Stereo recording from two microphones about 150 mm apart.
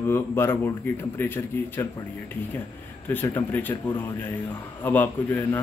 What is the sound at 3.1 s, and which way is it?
Speech, 15° left (ahead or behind).